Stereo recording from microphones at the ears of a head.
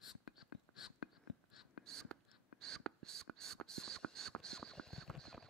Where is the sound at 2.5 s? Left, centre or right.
Right.